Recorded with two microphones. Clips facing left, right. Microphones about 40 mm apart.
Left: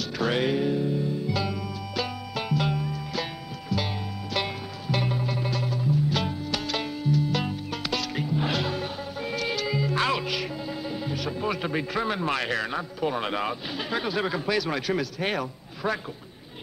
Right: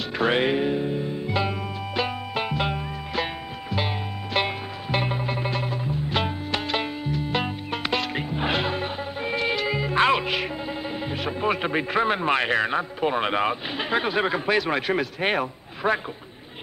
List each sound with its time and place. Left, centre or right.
0.2 s music: right